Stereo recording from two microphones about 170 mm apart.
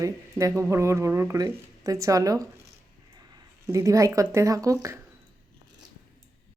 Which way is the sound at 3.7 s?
20° right (ahead or behind).